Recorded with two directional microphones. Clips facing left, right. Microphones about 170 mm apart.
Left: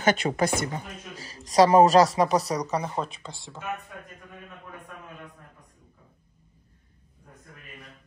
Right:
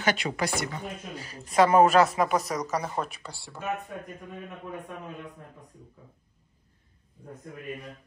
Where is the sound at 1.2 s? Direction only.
35° left (ahead or behind).